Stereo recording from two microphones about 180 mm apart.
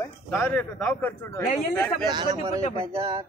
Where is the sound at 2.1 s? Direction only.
25° right (ahead or behind).